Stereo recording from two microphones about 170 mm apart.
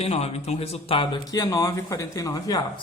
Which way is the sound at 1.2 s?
20° left (ahead or behind).